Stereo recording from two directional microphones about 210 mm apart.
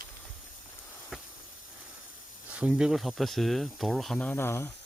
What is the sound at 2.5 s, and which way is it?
Speech, 5° right (ahead or behind).